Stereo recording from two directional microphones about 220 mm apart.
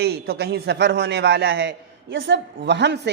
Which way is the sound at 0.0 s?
45° right (ahead or behind).